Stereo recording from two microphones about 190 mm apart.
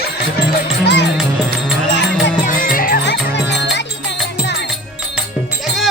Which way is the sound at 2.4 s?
45° left (ahead or behind).